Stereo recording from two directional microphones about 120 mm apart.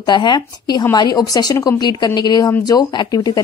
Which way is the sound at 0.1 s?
40° left (ahead or behind).